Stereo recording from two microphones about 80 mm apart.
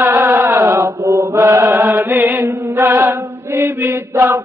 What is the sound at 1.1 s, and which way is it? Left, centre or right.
Chant, right.